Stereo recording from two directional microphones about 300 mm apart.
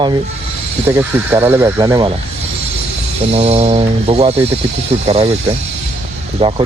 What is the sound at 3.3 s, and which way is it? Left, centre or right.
Speech, centre.